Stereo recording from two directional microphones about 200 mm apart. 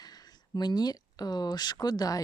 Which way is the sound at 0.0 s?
20° left (ahead or behind).